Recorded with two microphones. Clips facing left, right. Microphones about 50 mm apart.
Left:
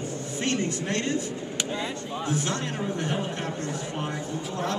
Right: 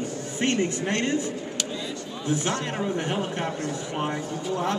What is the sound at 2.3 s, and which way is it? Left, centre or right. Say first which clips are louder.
A man's voice: right 4 dB; right.